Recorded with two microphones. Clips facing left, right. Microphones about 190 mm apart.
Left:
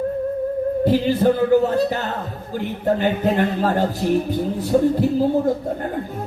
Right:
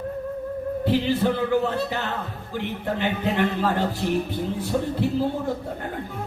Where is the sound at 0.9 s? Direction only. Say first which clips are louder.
Left 4 dB; 40° left (ahead or behind).